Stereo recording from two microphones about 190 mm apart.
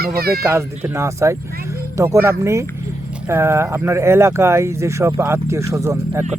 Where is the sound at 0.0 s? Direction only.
55° right (ahead or behind).